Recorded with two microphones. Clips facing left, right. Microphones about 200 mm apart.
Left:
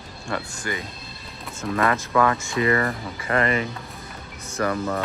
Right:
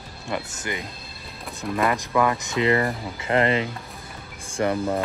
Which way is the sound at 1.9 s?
15° right (ahead or behind).